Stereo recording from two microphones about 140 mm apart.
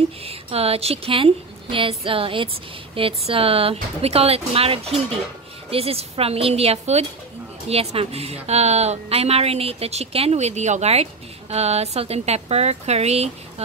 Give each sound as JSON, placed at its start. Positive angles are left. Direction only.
{"t": 0.2, "sound": "speech", "side_deg": -45}